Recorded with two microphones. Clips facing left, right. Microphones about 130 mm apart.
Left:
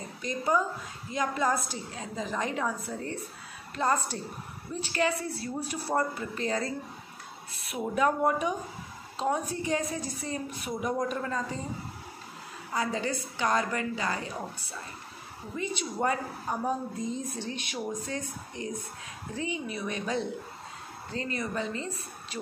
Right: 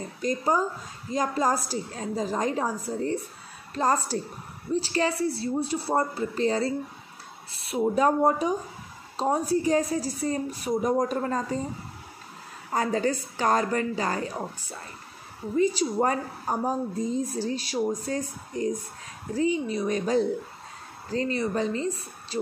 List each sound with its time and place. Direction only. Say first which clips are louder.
0.2 s speech: right 3 dB; 40° right (ahead or behind)
12.7 s speech: right 5 dB; 40° right (ahead or behind)